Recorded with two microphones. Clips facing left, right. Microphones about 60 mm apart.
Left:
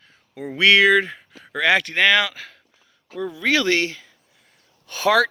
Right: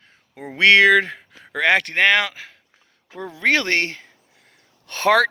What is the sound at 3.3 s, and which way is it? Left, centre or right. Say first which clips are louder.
Speech: right 1 dB; right.